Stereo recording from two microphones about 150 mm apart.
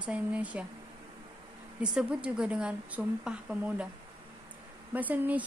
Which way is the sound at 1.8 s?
5° right (ahead or behind).